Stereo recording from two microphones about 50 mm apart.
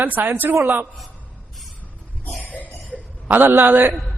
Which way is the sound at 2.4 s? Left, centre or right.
Left.